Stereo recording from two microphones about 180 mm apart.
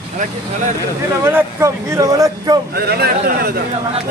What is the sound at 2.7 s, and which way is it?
Speech, 60° right (ahead or behind).